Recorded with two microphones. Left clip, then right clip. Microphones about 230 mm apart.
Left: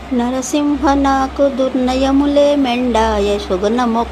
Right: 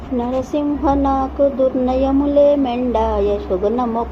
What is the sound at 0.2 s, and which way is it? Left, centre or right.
Speech, left.